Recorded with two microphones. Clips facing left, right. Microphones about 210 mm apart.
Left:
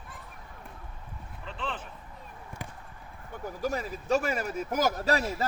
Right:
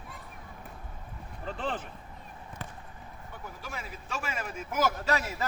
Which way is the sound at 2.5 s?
10° left (ahead or behind).